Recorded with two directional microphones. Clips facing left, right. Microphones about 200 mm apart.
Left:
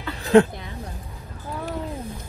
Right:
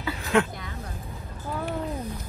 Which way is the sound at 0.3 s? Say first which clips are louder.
Left 8 dB; 35° left (ahead or behind).